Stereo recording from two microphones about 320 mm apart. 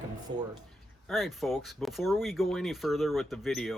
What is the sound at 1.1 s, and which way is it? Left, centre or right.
Speech, centre.